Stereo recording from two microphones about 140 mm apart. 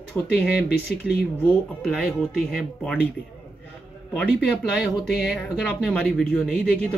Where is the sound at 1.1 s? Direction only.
Centre (ahead or behind).